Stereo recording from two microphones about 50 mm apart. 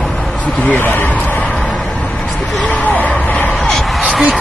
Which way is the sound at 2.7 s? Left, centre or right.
Left.